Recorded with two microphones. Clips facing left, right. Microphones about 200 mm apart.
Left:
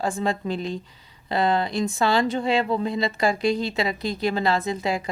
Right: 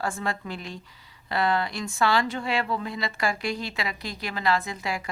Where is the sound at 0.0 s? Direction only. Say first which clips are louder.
Left 5 dB; 20° left (ahead or behind).